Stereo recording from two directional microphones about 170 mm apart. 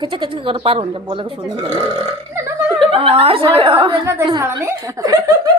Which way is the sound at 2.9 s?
35° right (ahead or behind).